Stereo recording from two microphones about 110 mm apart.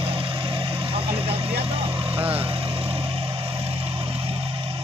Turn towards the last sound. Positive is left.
turn(degrees=-55)  # may be behind; listen again after turning